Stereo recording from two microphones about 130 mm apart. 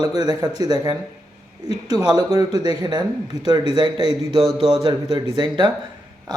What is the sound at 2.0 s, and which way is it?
Speech, 30° right (ahead or behind).